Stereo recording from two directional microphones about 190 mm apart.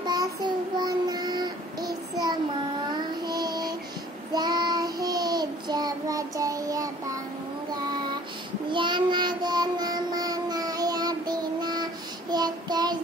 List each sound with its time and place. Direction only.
0.0 s child singing: 20° right (ahead or behind)